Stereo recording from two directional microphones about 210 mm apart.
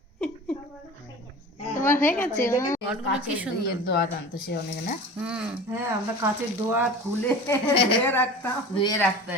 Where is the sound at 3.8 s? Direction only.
45° left (ahead or behind).